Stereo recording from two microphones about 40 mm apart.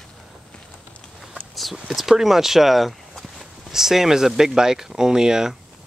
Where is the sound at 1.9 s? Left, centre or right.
Centre.